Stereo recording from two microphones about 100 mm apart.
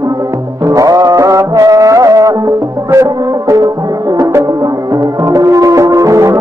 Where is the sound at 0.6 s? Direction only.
35° right (ahead or behind).